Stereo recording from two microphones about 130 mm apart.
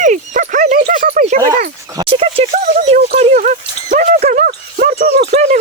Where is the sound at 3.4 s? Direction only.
90° right.